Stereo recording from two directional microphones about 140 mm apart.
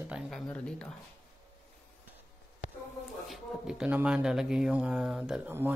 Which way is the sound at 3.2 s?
5° right (ahead or behind).